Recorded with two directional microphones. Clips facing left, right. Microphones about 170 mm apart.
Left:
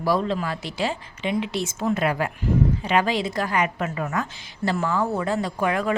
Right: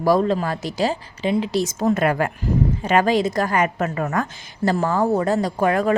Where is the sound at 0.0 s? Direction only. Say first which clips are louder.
Right 5 dB; 45° right (ahead or behind).